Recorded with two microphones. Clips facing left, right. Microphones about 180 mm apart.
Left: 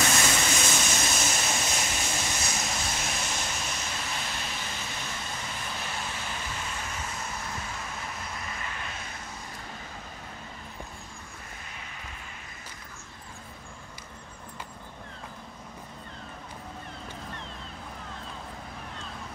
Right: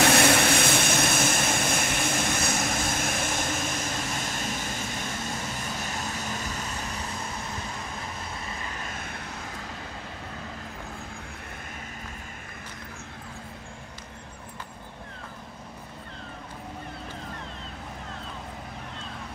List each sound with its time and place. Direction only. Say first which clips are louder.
0.0 s vehicle: right 7 dB; 60° right (ahead or behind)
5.9 s vehicle: right 3 dB; 40° right (ahead or behind)
8.8 s vehicle: right 3 dB; 60° right (ahead or behind)